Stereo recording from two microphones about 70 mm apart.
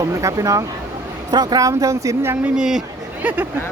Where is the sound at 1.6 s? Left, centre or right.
Right.